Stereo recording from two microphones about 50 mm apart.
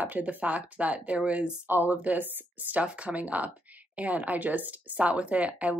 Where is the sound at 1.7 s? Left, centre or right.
Right.